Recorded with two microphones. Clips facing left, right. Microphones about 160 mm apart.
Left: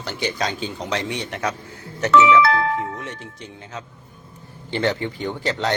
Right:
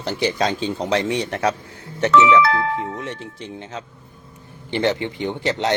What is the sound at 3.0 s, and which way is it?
A man's voice, 30° right (ahead or behind).